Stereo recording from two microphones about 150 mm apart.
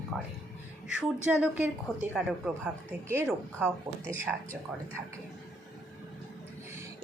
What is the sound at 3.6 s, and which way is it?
Speech, 5° right (ahead or behind).